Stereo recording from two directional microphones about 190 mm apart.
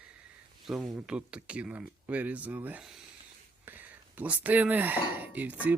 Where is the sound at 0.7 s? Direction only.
5° right (ahead or behind).